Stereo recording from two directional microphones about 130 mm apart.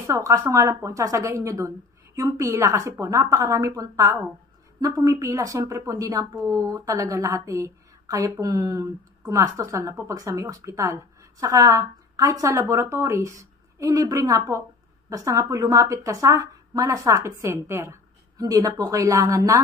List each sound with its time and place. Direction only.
0.0 s a woman's voice: 25° right (ahead or behind)